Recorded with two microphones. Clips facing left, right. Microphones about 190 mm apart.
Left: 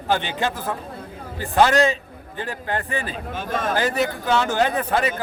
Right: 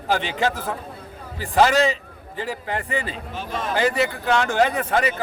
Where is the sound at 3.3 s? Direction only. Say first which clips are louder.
Left 3 dB; 50° left (ahead or behind).